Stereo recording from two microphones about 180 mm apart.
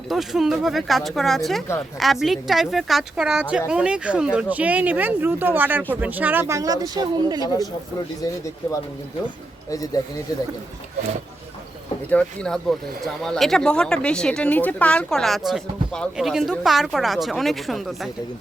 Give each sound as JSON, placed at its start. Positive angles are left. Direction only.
{"t": 0.1, "sound": "speech", "side_deg": 0}
{"t": 7.4, "sound": "speech", "side_deg": 20}
{"t": 9.6, "sound": "speech", "side_deg": 20}
{"t": 12.1, "sound": "speech", "side_deg": 5}